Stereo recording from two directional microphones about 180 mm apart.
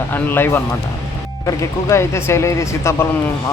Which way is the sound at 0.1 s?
10° left (ahead or behind).